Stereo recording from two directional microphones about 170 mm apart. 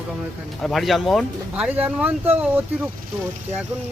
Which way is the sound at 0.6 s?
Centre (ahead or behind).